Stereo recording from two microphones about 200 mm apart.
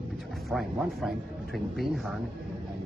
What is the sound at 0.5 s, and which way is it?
Speech, centre (ahead or behind).